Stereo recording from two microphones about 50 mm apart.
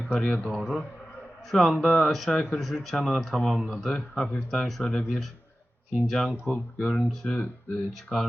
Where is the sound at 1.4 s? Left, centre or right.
Centre.